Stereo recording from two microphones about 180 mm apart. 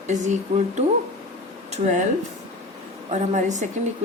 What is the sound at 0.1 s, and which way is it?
Speech, 40° right (ahead or behind).